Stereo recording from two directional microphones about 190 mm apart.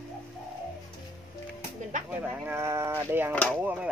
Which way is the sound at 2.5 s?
15° right (ahead or behind).